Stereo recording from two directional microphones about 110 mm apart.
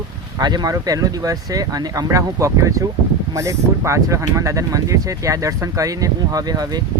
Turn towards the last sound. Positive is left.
turn(degrees=-35)  # may be behind; listen again after turning